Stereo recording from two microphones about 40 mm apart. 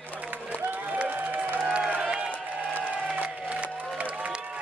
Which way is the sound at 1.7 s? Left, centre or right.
Right.